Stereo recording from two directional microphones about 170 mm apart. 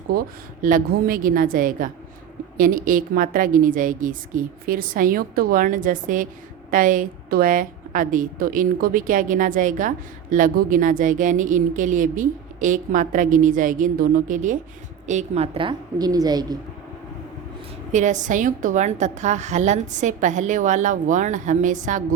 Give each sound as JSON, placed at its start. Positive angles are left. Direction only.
{"t": 0.1, "sound": "a woman's voice", "side_deg": -55}
{"t": 17.9, "sound": "speech", "side_deg": -45}